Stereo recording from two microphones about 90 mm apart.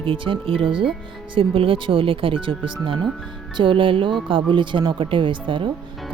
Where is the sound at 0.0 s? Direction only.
80° right.